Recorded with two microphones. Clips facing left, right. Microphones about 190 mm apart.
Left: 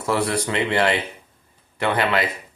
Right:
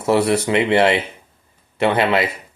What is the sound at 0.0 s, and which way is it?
Speech, 25° right (ahead or behind).